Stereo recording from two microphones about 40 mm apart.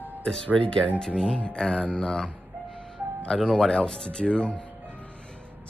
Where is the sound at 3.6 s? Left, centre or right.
Centre.